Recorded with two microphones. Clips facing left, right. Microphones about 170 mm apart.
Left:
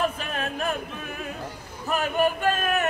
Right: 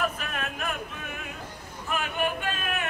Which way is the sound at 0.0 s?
30° left (ahead or behind).